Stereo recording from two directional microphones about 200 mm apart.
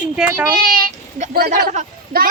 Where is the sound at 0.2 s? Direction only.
10° right (ahead or behind).